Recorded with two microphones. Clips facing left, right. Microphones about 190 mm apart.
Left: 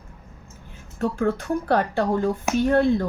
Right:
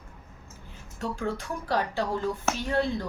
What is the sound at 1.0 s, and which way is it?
Speech, 55° left (ahead or behind).